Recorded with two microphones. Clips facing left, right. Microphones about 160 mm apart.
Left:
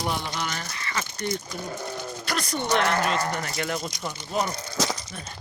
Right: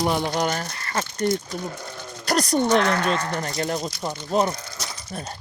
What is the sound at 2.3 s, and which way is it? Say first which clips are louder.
Speech: right 9 dB; 40° right (ahead or behind).